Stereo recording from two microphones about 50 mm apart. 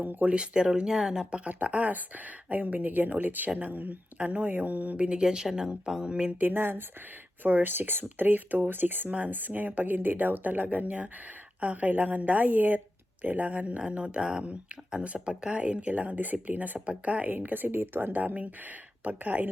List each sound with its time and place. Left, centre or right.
0.0 s speech: right
0.3 s speech: centre
1.5 s speech: right
4.9 s speech: centre
6.5 s speech: right
17.3 s speech: right